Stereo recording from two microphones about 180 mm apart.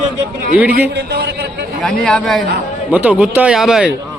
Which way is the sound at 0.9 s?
65° right (ahead or behind).